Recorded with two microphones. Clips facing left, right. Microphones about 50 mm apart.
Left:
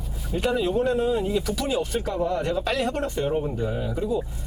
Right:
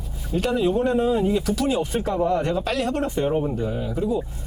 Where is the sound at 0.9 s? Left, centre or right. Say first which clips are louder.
Right 3 dB; right.